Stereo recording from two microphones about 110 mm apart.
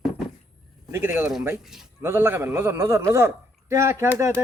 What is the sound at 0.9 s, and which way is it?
Speech, 20° right (ahead or behind).